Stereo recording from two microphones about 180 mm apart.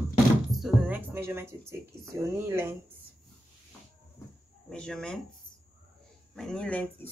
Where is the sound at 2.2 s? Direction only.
15° right (ahead or behind).